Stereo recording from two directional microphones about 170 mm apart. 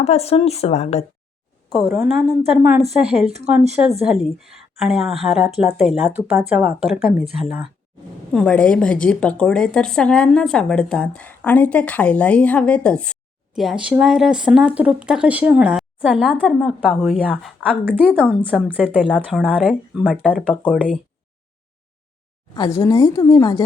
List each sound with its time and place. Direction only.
0.0 s speech: 40° left (ahead or behind)
1.8 s a woman's voice: centre (ahead or behind)
17.8 s a woman's voice: 10° right (ahead or behind)
20.4 s speech: 5° left (ahead or behind)
22.5 s a woman's voice: 20° left (ahead or behind)